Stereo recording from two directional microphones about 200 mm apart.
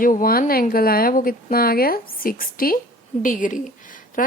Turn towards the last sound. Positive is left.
turn(degrees=40)  # may be behind; listen again after turning